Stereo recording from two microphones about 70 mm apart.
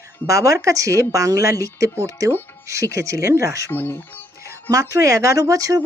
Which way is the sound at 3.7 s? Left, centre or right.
Left.